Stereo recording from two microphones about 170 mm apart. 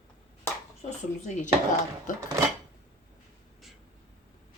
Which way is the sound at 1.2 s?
45° left (ahead or behind).